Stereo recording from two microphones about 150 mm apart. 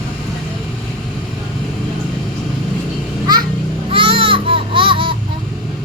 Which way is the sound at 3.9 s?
35° right (ahead or behind).